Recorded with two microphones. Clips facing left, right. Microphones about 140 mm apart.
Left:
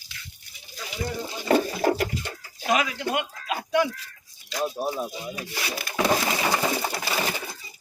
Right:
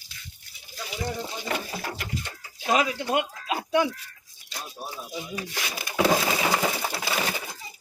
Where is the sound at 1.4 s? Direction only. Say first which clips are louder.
Left 14 dB; 40° left (ahead or behind).